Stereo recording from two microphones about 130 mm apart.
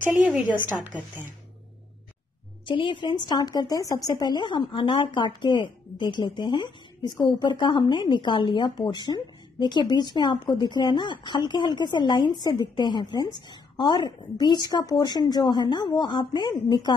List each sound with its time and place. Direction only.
0.0 s a woman's voice: 10° right (ahead or behind)
2.6 s a woman's voice: 40° left (ahead or behind)